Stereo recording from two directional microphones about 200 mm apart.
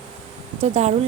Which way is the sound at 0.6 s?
35° right (ahead or behind).